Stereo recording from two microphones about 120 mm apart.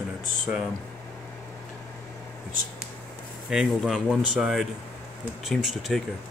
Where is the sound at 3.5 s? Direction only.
5° right (ahead or behind).